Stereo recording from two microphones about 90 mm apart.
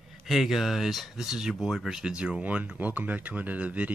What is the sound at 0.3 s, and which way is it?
Speech, centre (ahead or behind).